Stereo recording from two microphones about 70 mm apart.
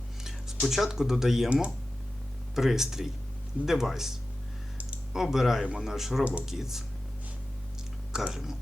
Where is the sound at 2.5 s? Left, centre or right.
Centre.